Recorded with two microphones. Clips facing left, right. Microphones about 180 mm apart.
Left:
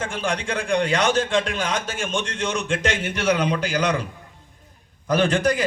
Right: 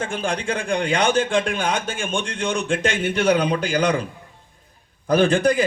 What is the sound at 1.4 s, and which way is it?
A man's voice, 55° right (ahead or behind).